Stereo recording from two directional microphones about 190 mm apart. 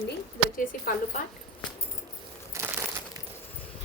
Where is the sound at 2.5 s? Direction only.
15° right (ahead or behind).